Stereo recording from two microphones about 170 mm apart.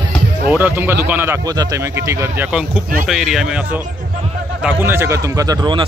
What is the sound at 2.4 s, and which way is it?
Speech, 5° right (ahead or behind).